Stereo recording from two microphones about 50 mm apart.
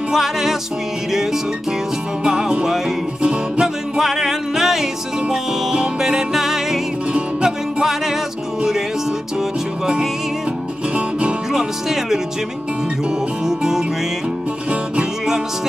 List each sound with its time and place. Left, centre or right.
0.1 s music: centre
2.2 s music: centre
3.6 s music: centre
11.0 s music: right
11.5 s music: centre
13.5 s music: centre